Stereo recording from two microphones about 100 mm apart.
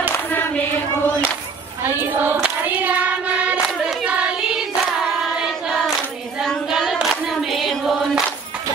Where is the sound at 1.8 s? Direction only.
20° right (ahead or behind).